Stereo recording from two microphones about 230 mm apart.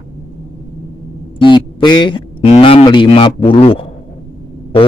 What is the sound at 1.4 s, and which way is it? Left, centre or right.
A man's voice, left.